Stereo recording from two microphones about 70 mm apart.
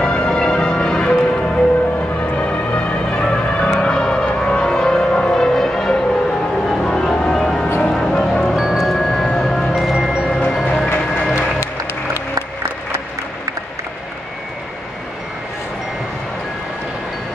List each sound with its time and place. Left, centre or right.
0.0 s music: centre
8.5 s music: centre
9.8 s marimba: centre
10.4 s train: centre
11.3 s music: left